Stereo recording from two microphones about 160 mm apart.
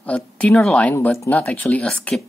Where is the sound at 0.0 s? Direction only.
10° left (ahead or behind).